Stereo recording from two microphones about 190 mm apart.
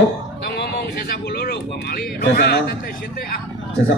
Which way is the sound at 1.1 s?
55° left (ahead or behind).